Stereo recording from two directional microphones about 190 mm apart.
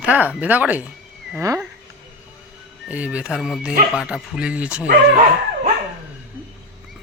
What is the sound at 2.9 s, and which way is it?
Speech, 5° right (ahead or behind).